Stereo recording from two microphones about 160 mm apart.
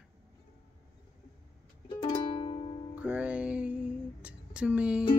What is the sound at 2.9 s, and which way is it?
Music, 10° right (ahead or behind).